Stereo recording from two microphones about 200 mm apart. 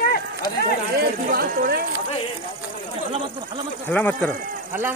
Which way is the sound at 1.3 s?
45° right (ahead or behind).